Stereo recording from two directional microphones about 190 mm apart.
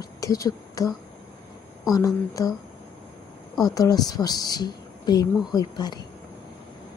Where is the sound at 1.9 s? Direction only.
20° left (ahead or behind).